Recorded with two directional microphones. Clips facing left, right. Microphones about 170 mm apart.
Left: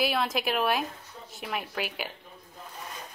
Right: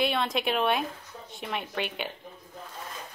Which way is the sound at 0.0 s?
Centre (ahead or behind).